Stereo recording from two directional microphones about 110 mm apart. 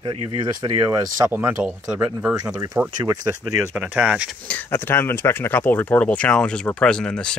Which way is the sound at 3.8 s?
10° right (ahead or behind).